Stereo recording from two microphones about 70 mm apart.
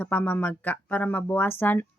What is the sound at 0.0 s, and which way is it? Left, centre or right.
A woman's voice, left.